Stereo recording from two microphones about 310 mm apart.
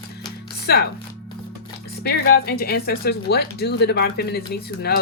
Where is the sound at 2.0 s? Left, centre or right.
Left.